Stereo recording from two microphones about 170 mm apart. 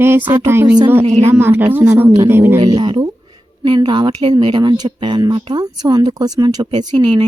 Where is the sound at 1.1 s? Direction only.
40° right (ahead or behind).